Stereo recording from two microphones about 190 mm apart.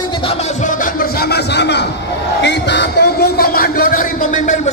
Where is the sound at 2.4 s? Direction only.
65° left (ahead or behind).